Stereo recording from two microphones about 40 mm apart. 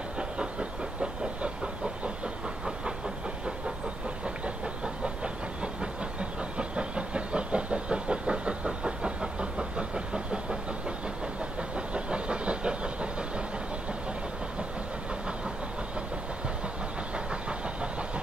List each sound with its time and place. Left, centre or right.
0.2 s train: right
1.4 s vehicle: right
4.8 s train: right
11.7 s train: right
17.1 s train: right